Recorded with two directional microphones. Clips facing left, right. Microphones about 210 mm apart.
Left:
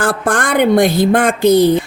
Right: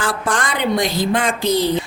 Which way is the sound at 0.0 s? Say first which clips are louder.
Left 5 dB; 55° left (ahead or behind).